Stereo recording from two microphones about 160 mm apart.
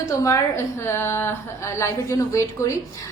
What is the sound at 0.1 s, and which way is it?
A woman's voice, 20° left (ahead or behind).